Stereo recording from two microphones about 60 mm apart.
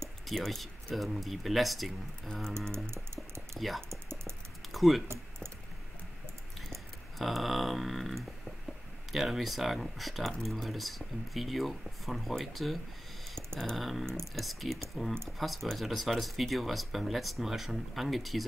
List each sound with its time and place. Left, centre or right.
0.3 s speech: centre
2.2 s music: centre
3.5 s speech: centre
3.9 s typing: right
4.7 s speech: centre
5.0 s typing: right
6.7 s a sound: centre
9.1 s speech: centre